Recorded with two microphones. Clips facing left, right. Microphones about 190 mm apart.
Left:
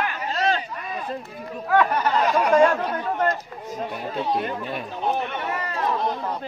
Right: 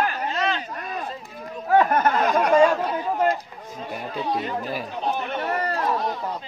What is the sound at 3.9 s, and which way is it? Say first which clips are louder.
Speech: even; centre (ahead or behind).